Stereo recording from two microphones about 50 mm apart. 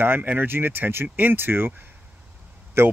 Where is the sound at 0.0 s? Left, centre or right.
Right.